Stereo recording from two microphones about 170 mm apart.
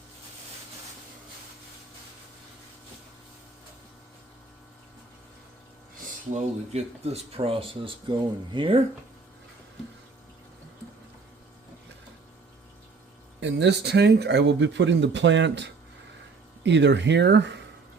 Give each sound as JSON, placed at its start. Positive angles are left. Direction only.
{"t": 6.3, "sound": "speech", "side_deg": -40}
{"t": 13.4, "sound": "speech", "side_deg": -85}